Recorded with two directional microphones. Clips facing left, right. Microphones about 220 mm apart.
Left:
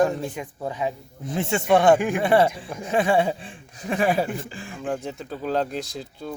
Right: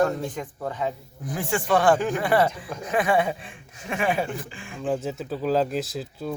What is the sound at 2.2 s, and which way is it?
Speech, 25° left (ahead or behind).